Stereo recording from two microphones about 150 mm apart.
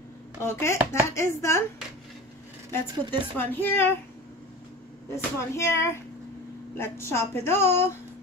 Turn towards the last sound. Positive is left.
turn(degrees=15)  # may be behind; listen again after turning